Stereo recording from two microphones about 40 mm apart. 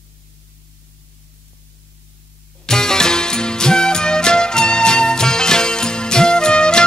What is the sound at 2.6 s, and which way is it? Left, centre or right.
Music, centre.